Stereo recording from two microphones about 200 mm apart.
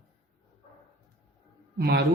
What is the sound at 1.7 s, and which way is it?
Speech, 55° right (ahead or behind).